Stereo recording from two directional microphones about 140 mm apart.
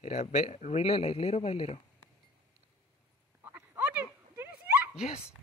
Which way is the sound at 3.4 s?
15° right (ahead or behind).